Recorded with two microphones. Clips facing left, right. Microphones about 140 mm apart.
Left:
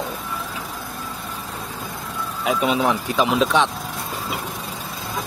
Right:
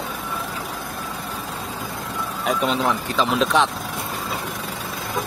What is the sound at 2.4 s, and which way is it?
Speech, 5° left (ahead or behind).